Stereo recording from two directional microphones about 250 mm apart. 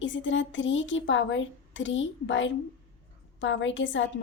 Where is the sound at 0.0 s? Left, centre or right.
Left.